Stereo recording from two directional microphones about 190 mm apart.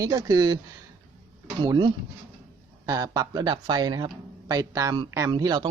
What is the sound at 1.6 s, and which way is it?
Speech, 20° right (ahead or behind).